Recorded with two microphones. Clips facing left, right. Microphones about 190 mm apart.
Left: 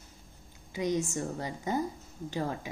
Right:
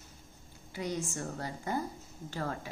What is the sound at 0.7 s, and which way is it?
A woman's voice, 15° left (ahead or behind).